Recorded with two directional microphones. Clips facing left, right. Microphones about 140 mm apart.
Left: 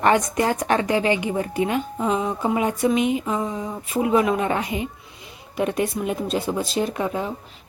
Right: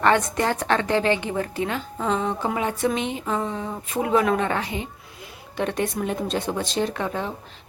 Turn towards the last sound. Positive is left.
turn(degrees=10)  # may be behind; listen again after turning